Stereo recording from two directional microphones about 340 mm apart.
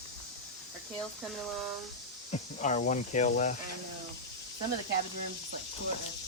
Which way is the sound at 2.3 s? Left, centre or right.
Centre.